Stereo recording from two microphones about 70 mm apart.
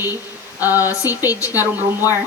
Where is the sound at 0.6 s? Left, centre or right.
Right.